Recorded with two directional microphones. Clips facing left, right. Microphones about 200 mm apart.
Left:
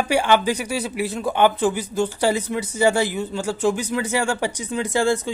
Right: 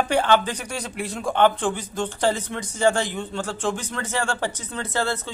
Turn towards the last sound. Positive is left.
turn(degrees=15)  # may be behind; listen again after turning